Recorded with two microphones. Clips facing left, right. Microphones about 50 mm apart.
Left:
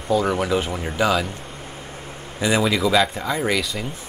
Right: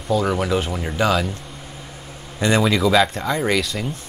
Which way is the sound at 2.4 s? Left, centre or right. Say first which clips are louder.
Right 2 dB; centre.